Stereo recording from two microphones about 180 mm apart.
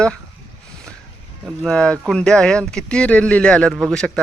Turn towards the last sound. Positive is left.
turn(degrees=5)  # may be behind; listen again after turning